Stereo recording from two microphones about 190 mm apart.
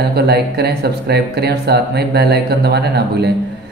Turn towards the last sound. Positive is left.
turn(degrees=-60)  # may be behind; listen again after turning